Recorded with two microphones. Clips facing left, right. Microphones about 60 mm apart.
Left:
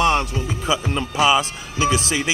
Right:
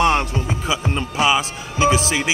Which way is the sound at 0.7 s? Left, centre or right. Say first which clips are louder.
Left 2 dB; centre.